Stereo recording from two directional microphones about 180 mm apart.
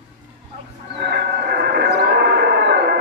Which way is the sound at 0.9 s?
65° right (ahead or behind).